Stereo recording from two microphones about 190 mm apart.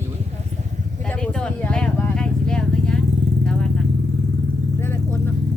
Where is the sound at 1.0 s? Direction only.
5° left (ahead or behind).